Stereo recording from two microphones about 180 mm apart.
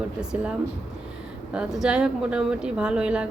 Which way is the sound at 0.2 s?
5° right (ahead or behind).